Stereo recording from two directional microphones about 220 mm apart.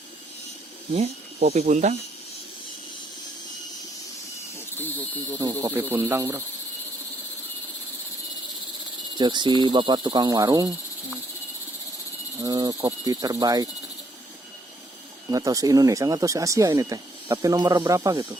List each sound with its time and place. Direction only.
0.9 s speech: 30° right (ahead or behind)
4.8 s speech: 10° left (ahead or behind)
5.4 s speech: 15° right (ahead or behind)
9.1 s speech: 20° right (ahead or behind)
12.4 s speech: 15° right (ahead or behind)
15.3 s speech: 15° right (ahead or behind)